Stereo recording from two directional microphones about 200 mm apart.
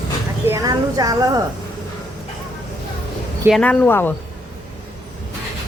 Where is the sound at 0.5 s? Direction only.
15° right (ahead or behind).